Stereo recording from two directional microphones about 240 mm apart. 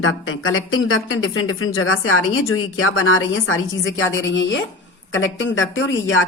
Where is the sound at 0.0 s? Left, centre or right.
Left.